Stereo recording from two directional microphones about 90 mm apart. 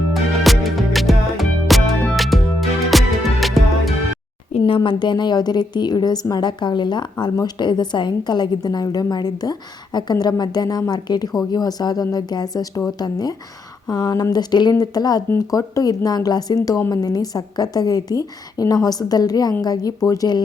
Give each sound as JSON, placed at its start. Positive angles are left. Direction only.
{"t": 0.1, "sound": "music", "side_deg": 0}
{"t": 4.5, "sound": "a woman's voice", "side_deg": 80}